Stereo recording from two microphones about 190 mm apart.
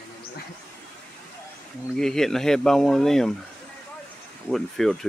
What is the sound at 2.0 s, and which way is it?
Speech, centre (ahead or behind).